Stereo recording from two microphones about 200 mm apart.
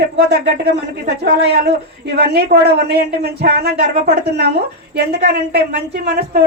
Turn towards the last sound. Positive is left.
turn(degrees=-55)  # may be behind; listen again after turning